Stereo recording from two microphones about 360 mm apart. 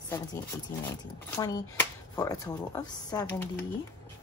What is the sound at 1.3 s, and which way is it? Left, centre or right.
Speech, centre.